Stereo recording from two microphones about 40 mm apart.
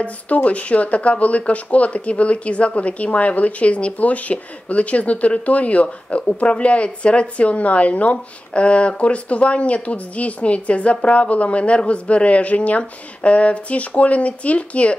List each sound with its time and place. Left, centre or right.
0.0 s speech: left